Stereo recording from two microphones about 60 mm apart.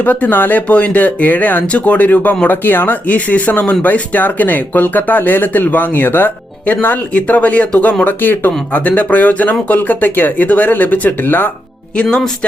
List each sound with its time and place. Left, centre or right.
0.0 s speech: left